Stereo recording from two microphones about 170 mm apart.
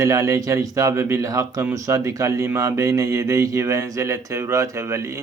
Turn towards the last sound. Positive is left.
turn(degrees=-15)  # may be behind; listen again after turning